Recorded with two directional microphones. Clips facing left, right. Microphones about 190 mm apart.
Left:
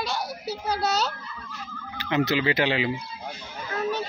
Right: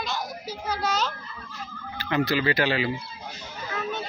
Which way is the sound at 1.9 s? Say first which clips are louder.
Left 1 dB; 20° left (ahead or behind).